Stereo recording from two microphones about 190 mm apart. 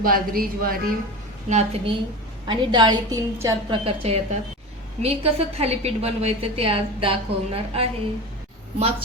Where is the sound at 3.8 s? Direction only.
30° right (ahead or behind).